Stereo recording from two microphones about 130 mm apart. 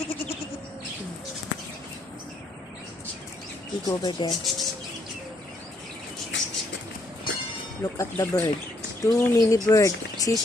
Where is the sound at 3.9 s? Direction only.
30° left (ahead or behind).